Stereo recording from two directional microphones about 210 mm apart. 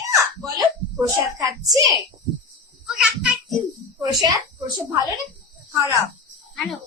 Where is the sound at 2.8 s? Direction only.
5° right (ahead or behind).